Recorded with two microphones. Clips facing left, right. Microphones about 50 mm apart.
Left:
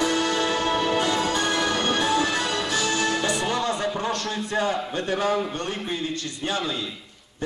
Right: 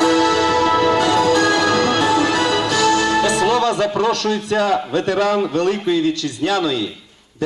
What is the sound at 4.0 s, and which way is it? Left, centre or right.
A man's voice, right.